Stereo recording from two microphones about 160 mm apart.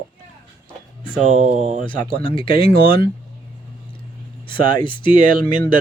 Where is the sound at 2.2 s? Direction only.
35° left (ahead or behind).